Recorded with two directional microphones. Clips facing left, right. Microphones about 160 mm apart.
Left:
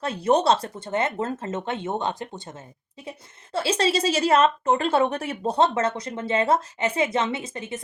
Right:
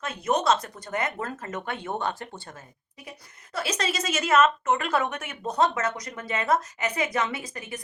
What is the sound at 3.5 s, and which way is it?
Speech, 30° left (ahead or behind).